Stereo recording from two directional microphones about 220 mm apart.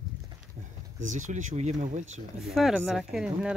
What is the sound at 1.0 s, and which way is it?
Speech, 35° right (ahead or behind).